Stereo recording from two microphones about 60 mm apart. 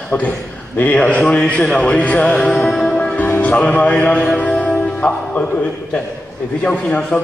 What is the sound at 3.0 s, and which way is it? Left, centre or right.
Music, left.